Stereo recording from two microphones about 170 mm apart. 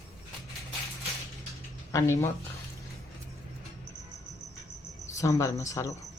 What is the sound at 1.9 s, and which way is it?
Speech, 15° left (ahead or behind).